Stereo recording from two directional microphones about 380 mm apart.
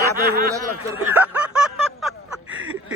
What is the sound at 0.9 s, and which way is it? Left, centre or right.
Snicker, centre.